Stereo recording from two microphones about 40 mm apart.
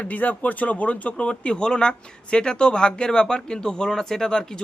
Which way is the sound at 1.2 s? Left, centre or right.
Left.